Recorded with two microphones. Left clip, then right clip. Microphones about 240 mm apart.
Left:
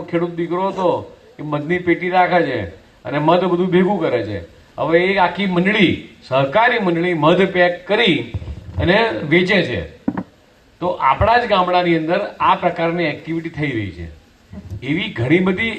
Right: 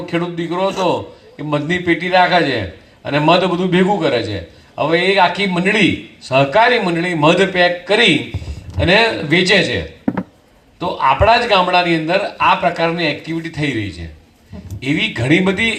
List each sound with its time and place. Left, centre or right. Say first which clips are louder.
0.0 s a man's voice: even; right